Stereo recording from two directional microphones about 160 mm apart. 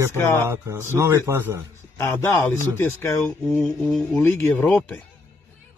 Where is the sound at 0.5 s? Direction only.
15° right (ahead or behind).